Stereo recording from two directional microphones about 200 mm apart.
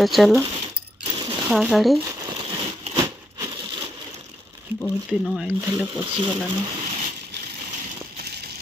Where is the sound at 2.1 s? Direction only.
20° right (ahead or behind).